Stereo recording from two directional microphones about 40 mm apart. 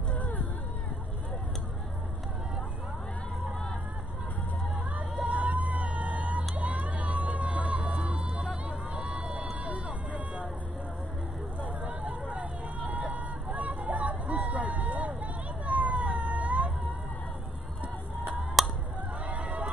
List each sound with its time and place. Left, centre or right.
0.1 s a sound: left
4.9 s a sound: right
8.6 s run: right
9.5 s vehicle: right
11.8 s hubbub: right
13.1 s vehicle: right
18.6 s honk: centre
19.2 s crowd: right